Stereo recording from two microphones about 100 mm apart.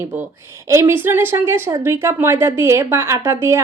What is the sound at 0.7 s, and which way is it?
A woman's voice, 25° right (ahead or behind).